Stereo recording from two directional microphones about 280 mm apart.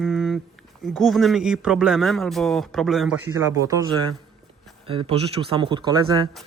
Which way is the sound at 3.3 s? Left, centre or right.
Centre.